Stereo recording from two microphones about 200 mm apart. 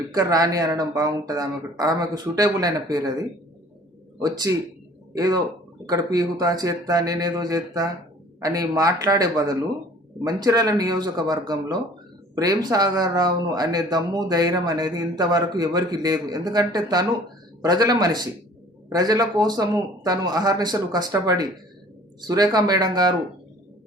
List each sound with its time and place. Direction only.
0.1 s a man's voice: 20° right (ahead or behind)